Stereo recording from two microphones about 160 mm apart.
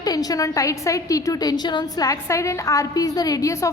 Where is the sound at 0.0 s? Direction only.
25° left (ahead or behind).